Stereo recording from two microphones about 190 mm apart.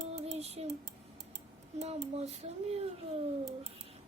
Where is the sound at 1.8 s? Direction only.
35° right (ahead or behind).